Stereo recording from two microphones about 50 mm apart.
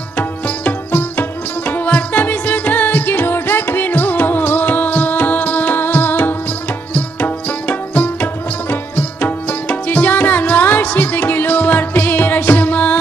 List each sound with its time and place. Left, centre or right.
0.7 s sitar: left
1.7 s music: left
6.9 s music: left